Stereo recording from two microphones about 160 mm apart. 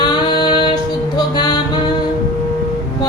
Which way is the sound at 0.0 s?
30° left (ahead or behind).